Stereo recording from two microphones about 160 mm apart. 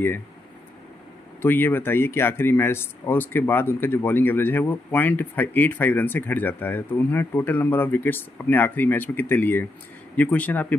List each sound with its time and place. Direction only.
1.4 s speech: 15° left (ahead or behind)